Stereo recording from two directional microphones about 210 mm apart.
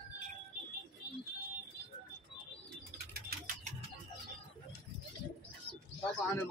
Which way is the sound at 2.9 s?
40° right (ahead or behind).